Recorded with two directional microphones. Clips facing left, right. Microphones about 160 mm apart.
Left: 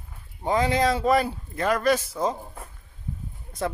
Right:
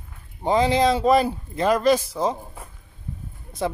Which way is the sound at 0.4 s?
25° right (ahead or behind).